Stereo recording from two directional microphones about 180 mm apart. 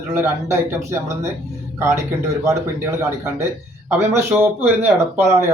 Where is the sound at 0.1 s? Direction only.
15° right (ahead or behind).